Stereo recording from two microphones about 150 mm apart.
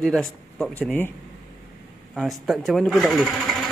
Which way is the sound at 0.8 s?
15° left (ahead or behind).